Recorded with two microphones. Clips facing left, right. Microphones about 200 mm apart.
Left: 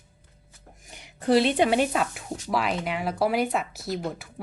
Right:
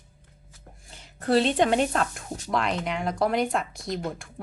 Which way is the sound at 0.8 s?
15° left (ahead or behind).